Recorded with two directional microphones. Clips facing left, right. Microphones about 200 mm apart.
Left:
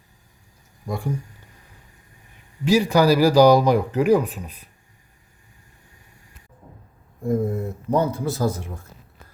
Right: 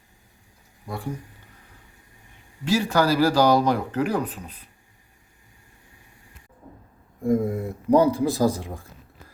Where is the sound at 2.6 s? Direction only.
15° left (ahead or behind).